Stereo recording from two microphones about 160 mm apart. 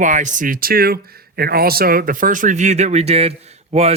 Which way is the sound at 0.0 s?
50° right (ahead or behind).